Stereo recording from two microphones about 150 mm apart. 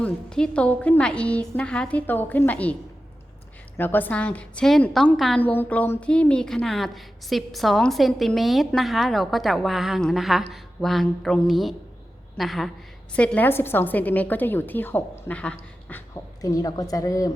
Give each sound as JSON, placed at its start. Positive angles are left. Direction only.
{"t": 0.0, "sound": "a woman's voice", "side_deg": 5}
{"t": 3.8, "sound": "a woman's voice", "side_deg": 15}
{"t": 16.4, "sound": "a woman's voice", "side_deg": 25}